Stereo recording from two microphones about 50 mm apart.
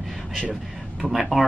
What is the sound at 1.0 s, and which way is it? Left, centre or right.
Speech, centre.